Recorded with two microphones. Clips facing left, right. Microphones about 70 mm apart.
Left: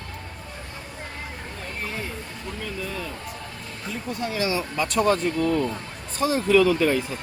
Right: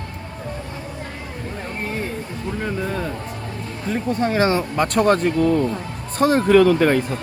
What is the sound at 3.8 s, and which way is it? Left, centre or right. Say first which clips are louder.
Speech: right 9 dB; right.